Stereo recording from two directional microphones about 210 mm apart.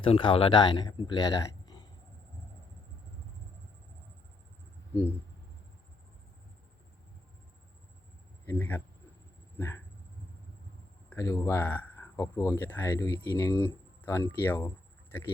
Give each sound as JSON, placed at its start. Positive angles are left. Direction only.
{"t": 0.0, "sound": "speech", "side_deg": 25}
{"t": 8.4, "sound": "speech", "side_deg": 10}
{"t": 9.6, "sound": "a sound", "side_deg": 10}
{"t": 11.1, "sound": "speech", "side_deg": 15}